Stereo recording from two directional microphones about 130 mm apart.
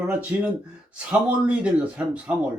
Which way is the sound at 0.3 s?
15° right (ahead or behind).